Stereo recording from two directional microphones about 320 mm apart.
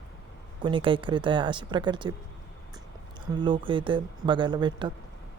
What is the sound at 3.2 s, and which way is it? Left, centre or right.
Speech, centre.